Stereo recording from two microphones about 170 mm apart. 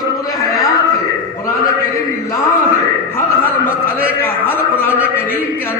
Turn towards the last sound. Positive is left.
turn(degrees=10)  # may be behind; listen again after turning